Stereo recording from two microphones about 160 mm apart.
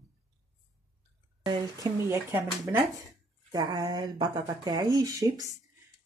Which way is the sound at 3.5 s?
25° right (ahead or behind).